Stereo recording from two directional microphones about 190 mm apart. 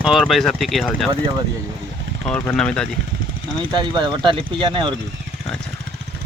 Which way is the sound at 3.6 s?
25° right (ahead or behind).